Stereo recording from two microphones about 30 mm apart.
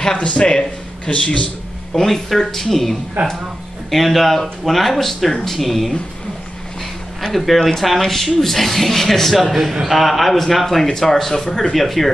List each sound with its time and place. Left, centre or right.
0.4 s speech: left
1.1 s speech: left
2.0 s speech: centre
7.2 s speech: centre